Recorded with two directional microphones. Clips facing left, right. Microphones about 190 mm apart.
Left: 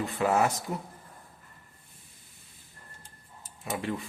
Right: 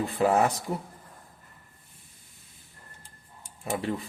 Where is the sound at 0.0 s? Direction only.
35° right (ahead or behind).